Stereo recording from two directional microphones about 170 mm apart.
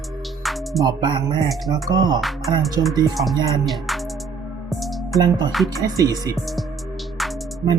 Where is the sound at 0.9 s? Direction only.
25° right (ahead or behind).